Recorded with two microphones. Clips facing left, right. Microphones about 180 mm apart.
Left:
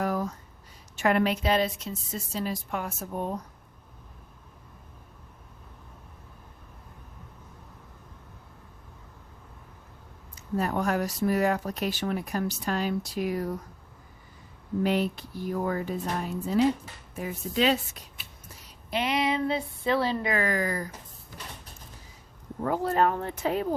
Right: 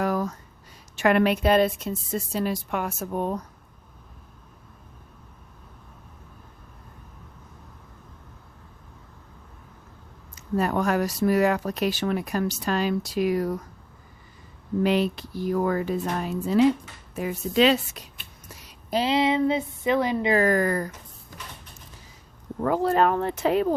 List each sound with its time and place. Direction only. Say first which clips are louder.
0.0 s a sound: right 3 dB; 85° right
0.9 s a woman's voice: right 4 dB; 75° right (ahead or behind)
10.3 s speech: right 4 dB; 85° right
14.8 s speech: right 4 dB; 85° right
18.9 s a woman's voice: right 5 dB; 30° right (ahead or behind)
20.3 s speech: right 6 dB; 45° right (ahead or behind)
22.6 s speech: right 4 dB; 90° right